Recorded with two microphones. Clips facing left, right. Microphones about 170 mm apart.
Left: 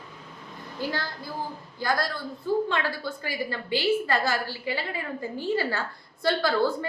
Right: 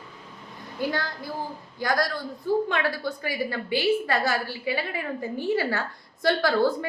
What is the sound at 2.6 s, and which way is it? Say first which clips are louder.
A woman's voice: right 2 dB; 15° right (ahead or behind).